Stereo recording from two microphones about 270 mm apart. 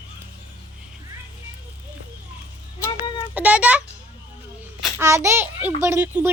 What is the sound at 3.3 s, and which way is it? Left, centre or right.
A child's voice, centre.